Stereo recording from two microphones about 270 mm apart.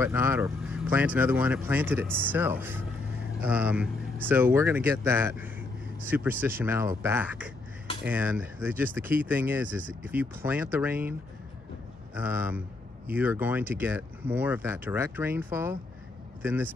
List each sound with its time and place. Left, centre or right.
0.0 s a man's voice: centre